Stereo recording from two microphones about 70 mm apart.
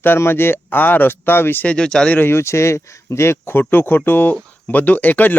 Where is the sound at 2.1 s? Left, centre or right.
Left.